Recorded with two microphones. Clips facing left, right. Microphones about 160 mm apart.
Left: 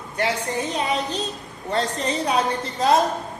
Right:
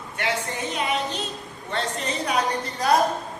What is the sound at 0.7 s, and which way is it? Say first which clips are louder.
A woman's voice: right 1 dB; 35° left (ahead or behind).